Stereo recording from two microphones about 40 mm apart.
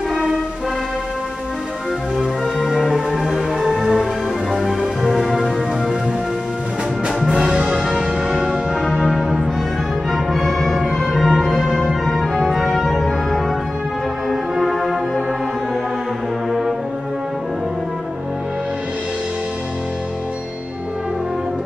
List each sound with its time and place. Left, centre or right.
2.1 s music: centre
7.2 s music: centre
8.9 s music: centre
14.3 s music: centre